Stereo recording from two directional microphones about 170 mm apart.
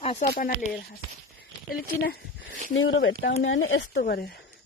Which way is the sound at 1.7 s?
60° left (ahead or behind).